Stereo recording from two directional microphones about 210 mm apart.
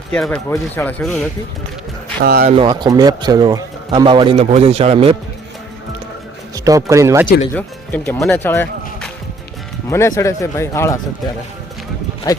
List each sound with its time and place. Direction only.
0.1 s speech: 5° left (ahead or behind)
2.2 s speech: 45° right (ahead or behind)
2.6 s a man's voice: 20° right (ahead or behind)
6.7 s speech: 15° right (ahead or behind)
7.5 s speech: 5° left (ahead or behind)
12.3 s speech: 15° left (ahead or behind)